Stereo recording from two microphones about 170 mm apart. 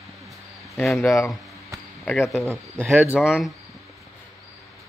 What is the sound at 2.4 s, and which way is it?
Speech, 15° right (ahead or behind).